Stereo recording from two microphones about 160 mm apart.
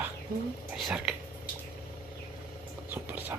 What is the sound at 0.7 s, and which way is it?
Whispering, 5° right (ahead or behind).